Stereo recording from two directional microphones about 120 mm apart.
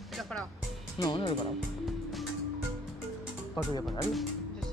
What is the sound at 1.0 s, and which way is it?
Speech, 40° left (ahead or behind).